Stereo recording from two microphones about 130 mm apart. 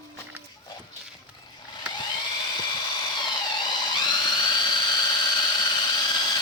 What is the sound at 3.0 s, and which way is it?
Dental drill, 35° left (ahead or behind).